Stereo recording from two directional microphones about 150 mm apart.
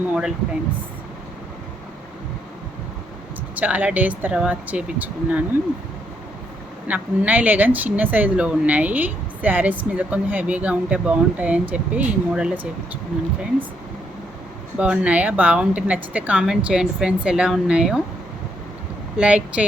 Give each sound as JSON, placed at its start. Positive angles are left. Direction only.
{"t": 0.1, "sound": "speech", "side_deg": -5}
{"t": 3.5, "sound": "a woman's voice", "side_deg": -10}
{"t": 6.8, "sound": "a woman's voice", "side_deg": -10}
{"t": 14.8, "sound": "a woman's voice", "side_deg": -10}
{"t": 19.1, "sound": "a woman's voice", "side_deg": -5}